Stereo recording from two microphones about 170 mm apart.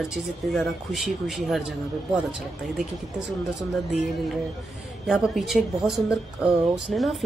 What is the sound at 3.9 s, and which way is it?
Speech, centre (ahead or behind).